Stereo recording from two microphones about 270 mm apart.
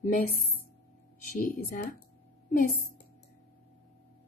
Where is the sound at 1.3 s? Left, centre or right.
Left.